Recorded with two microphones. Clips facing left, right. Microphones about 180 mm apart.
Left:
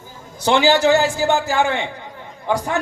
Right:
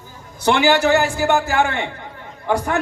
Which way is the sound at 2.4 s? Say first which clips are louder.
Right 1 dB; 20° left (ahead or behind).